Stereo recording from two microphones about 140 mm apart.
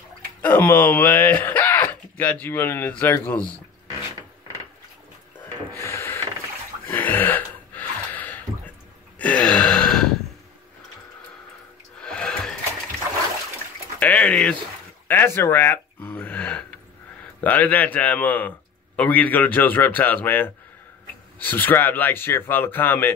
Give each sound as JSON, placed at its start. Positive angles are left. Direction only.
{"t": 0.4, "sound": "a sound", "side_deg": 10}
{"t": 2.4, "sound": "speech", "side_deg": 15}
{"t": 5.8, "sound": "mechanisms", "side_deg": 20}
{"t": 7.0, "sound": "gasp", "side_deg": 15}
{"t": 12.0, "sound": "music", "side_deg": 5}
{"t": 13.9, "sound": "a sound", "side_deg": 10}
{"t": 17.4, "sound": "speech", "side_deg": 10}